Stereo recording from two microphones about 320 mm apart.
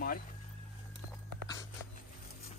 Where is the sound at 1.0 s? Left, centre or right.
Right.